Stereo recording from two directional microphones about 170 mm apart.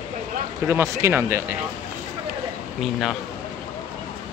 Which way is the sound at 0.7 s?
15° right (ahead or behind).